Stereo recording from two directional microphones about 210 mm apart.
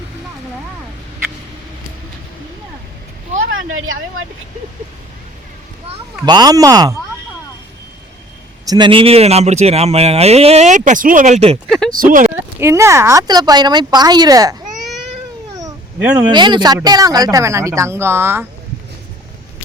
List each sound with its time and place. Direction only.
3.7 s speech: 70° right (ahead or behind)
6.2 s speech: 20° right (ahead or behind)
8.6 s speech: 20° right (ahead or behind); by 12.3 s 40° right (ahead or behind)
12.5 s speech: 15° right (ahead or behind)
15.6 s cat: 10° right (ahead or behind)
16.3 s speech: 20° right (ahead or behind)